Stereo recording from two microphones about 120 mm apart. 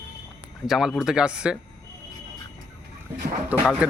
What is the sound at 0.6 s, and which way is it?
Speech, 5° right (ahead or behind).